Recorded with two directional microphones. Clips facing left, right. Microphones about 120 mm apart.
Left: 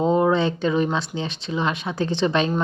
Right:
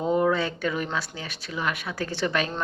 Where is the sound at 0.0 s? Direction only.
25° left (ahead or behind).